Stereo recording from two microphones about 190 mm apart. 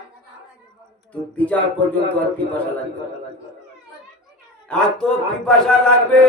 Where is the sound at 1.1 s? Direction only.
5° left (ahead or behind).